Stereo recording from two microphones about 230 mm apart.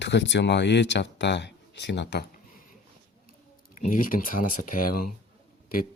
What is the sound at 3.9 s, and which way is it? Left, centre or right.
Speech, left.